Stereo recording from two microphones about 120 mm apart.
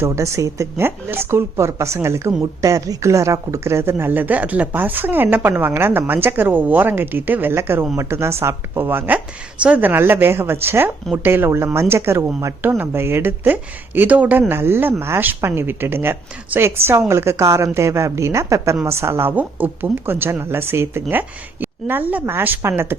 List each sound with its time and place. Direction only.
0.0 s speech: 25° right (ahead or behind)